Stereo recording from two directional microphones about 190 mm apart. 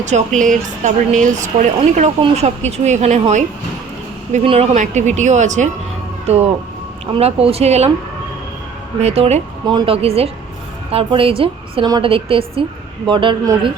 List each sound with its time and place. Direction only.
0.0 s a woman's voice: 40° right (ahead or behind)
9.0 s a woman's voice: 35° right (ahead or behind)